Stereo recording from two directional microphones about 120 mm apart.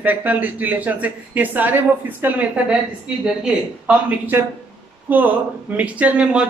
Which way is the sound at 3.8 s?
15° right (ahead or behind).